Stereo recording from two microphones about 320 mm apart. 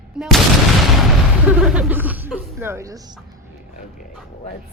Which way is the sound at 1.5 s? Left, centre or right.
Centre.